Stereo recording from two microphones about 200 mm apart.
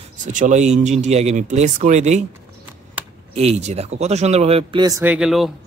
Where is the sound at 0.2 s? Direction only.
40° right (ahead or behind).